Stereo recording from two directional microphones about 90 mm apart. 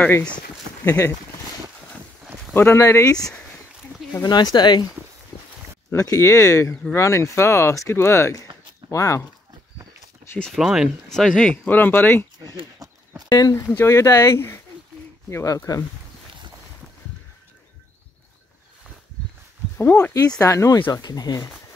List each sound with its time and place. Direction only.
0.8 s speech: 35° left (ahead or behind)
2.5 s speech: 25° left (ahead or behind)
4.2 s speech: 50° left (ahead or behind)
5.9 s speech: 40° left (ahead or behind)
6.7 s speech: 20° left (ahead or behind)
7.0 s speech: 35° left (ahead or behind)
10.4 s speech: centre (ahead or behind)
11.1 s speech: 5° left (ahead or behind)
11.5 s speech: 20° left (ahead or behind)
13.3 s speech: 40° left (ahead or behind)
13.7 s speech: 30° left (ahead or behind)
19.8 s speech: 15° left (ahead or behind)
20.4 s speech: 35° left (ahead or behind)
20.9 s speech: 45° left (ahead or behind)